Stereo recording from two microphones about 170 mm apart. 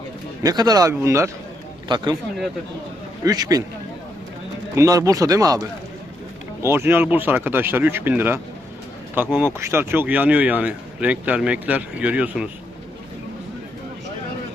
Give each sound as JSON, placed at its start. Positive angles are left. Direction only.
{"t": 0.4, "sound": "speech", "side_deg": -25}
{"t": 3.2, "sound": "speech", "side_deg": -20}
{"t": 4.7, "sound": "speech", "side_deg": -20}